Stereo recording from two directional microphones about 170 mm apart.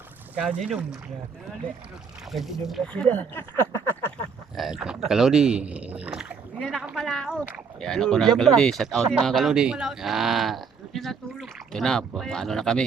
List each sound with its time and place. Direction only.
0.6 s speech: centre (ahead or behind)
2.3 s speech: centre (ahead or behind)
4.5 s speech: 5° right (ahead or behind)